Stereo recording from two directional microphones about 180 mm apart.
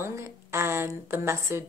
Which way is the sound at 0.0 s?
15° right (ahead or behind).